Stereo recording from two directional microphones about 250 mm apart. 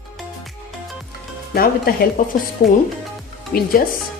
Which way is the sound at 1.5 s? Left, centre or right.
Left.